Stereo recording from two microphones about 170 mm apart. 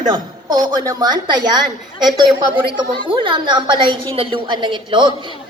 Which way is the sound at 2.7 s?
30° right (ahead or behind).